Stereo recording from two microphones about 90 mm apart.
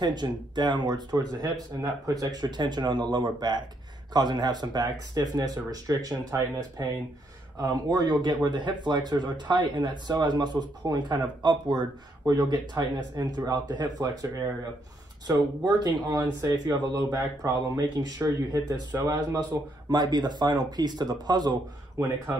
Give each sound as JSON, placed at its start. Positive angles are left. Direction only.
{"t": 0.0, "sound": "speech", "side_deg": -55}
{"t": 7.5, "sound": "speech", "side_deg": -45}
{"t": 19.9, "sound": "speech", "side_deg": -50}
{"t": 22.0, "sound": "speech", "side_deg": -35}